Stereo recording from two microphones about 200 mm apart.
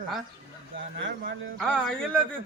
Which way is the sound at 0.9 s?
60° right (ahead or behind).